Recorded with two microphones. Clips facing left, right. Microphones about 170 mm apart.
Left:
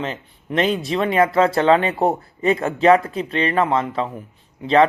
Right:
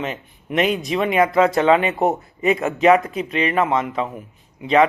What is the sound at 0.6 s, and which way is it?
Speech, 30° left (ahead or behind).